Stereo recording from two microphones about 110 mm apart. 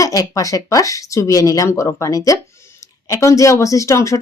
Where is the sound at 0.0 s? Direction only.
30° left (ahead or behind).